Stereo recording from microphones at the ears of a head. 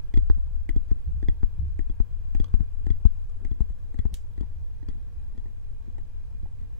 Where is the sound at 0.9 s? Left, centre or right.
Left.